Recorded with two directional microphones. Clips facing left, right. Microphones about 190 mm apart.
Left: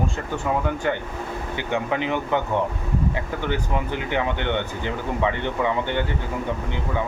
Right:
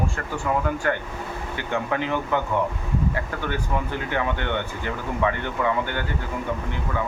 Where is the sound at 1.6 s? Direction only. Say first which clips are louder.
Left 1 dB; 20° left (ahead or behind).